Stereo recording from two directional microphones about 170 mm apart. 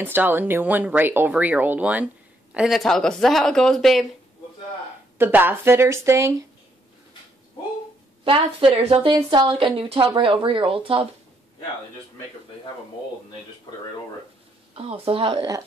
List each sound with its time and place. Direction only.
0.0 s speech: 10° right (ahead or behind)
5.1 s speech: 10° right (ahead or behind)
8.2 s speech: 30° right (ahead or behind)
14.8 s speech: 35° right (ahead or behind)